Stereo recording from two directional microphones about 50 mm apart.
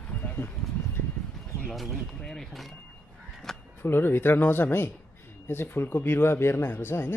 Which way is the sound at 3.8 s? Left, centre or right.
Left.